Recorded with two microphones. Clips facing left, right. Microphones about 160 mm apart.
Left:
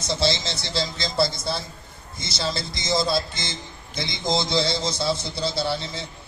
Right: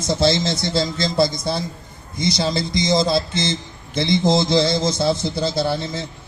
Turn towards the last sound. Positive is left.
turn(degrees=-50)  # may be behind; listen again after turning